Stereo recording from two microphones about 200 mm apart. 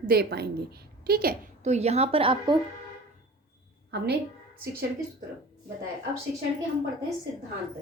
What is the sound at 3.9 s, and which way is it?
Speech, 55° right (ahead or behind).